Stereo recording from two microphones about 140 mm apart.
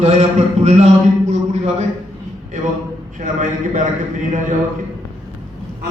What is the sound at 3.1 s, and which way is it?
Speech, 60° right (ahead or behind).